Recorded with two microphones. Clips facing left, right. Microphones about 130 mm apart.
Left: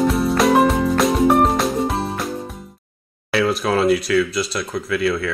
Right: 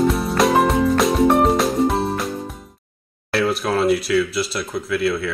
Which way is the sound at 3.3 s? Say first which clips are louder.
Left 1 dB; centre (ahead or behind).